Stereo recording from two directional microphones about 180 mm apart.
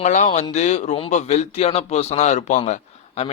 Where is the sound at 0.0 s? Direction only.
45° left (ahead or behind).